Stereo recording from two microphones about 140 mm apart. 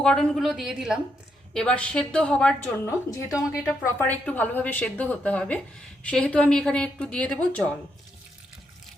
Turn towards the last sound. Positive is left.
turn(degrees=10)  # may be behind; listen again after turning